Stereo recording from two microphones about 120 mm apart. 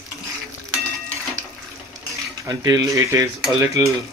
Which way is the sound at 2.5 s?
30° right (ahead or behind).